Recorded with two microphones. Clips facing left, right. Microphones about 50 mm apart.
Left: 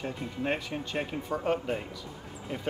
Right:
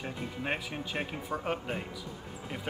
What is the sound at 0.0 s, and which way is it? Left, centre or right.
A man's voice, centre.